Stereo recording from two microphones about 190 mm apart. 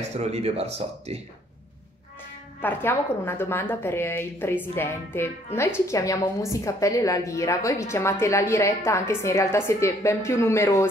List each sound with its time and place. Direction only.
0.2 s speech: 35° right (ahead or behind)
2.6 s a woman's voice: 10° left (ahead or behind)